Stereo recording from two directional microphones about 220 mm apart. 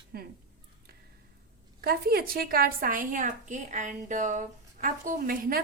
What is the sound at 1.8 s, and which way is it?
A woman's voice, 45° right (ahead or behind).